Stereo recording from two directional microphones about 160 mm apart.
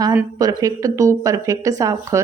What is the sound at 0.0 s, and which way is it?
Speech, 20° right (ahead or behind).